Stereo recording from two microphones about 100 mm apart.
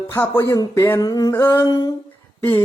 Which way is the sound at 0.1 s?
25° left (ahead or behind).